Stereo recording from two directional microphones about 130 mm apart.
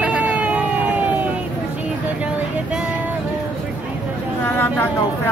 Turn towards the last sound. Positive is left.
turn(degrees=15)  # may be behind; listen again after turning